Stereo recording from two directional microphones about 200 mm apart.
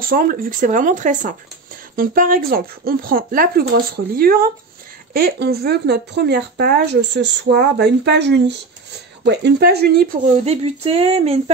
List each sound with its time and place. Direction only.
0.0 s speech: 45° right (ahead or behind)
10.3 s speech: 30° right (ahead or behind)